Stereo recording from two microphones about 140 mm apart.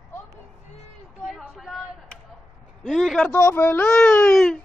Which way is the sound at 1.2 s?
Centre (ahead or behind).